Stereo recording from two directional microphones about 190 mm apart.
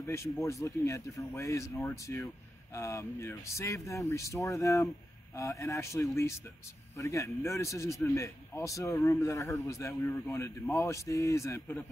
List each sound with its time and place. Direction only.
0.0 s a man's voice: 15° left (ahead or behind)